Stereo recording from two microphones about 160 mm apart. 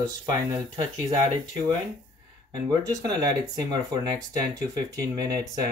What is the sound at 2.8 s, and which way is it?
Speech, 25° right (ahead or behind).